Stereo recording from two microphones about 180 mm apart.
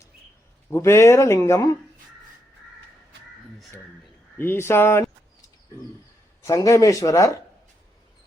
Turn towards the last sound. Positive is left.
turn(degrees=15)  # may be behind; listen again after turning